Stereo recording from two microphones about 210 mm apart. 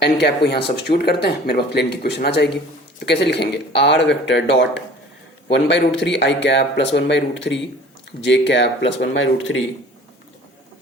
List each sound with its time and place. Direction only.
0.0 s speech: 50° left (ahead or behind)